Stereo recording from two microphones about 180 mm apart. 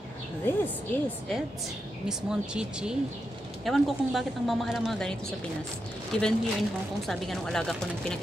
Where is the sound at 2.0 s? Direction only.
5° right (ahead or behind).